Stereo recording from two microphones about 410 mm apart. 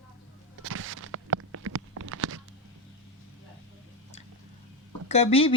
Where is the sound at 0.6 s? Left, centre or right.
Right.